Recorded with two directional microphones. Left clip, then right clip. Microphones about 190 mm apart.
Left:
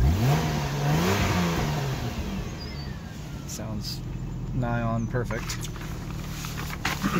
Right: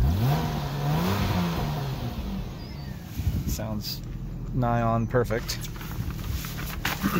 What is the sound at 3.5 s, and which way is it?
Speech, 20° right (ahead or behind).